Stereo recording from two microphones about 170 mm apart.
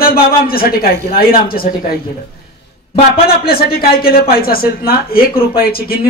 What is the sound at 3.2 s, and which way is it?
Speech, 65° left (ahead or behind).